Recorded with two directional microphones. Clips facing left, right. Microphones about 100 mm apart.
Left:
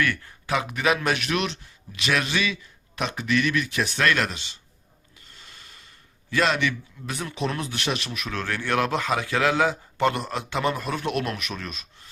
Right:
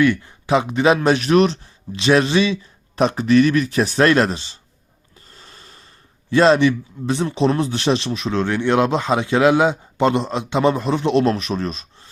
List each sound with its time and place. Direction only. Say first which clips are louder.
0.0 s speech: right 9 dB; 20° right (ahead or behind)
5.3 s a sound: right 4 dB; 35° right (ahead or behind)
6.3 s a man's voice: right 10 dB; 30° right (ahead or behind)